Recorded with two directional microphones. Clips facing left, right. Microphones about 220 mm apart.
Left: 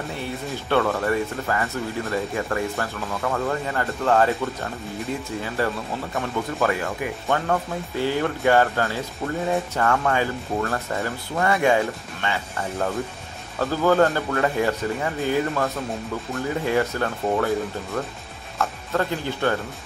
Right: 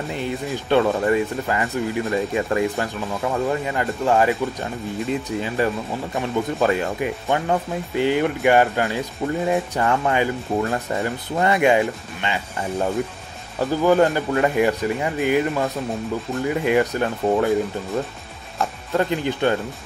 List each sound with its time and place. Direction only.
0.1 s speech: 20° right (ahead or behind)
18.6 s speech: 20° right (ahead or behind)